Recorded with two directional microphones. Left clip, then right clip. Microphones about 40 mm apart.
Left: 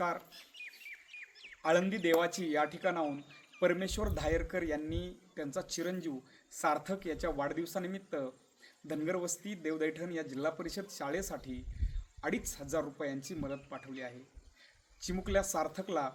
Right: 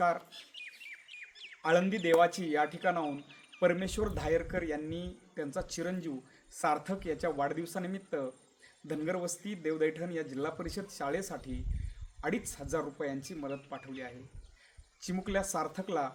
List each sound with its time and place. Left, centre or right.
0.9 s bird: right
1.6 s a man's voice: right
3.0 s speech: right
3.6 s a man's voice: centre
6.5 s a man's voice: centre
15.0 s a man's voice: centre